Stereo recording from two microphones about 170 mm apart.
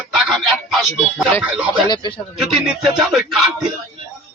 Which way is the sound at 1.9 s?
25° left (ahead or behind).